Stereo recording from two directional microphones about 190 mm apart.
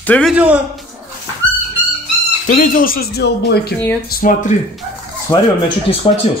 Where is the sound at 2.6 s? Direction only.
50° left (ahead or behind).